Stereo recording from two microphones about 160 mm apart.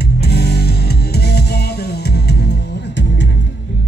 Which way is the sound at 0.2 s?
90° left.